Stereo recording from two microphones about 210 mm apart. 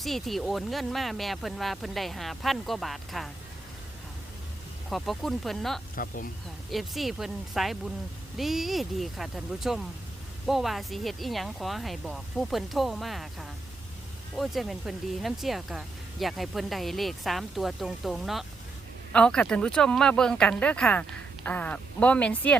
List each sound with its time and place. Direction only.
0.0 s speech: centre (ahead or behind)
4.9 s speech: centre (ahead or behind)
6.0 s speech: 40° left (ahead or behind)
6.7 s speech: centre (ahead or behind)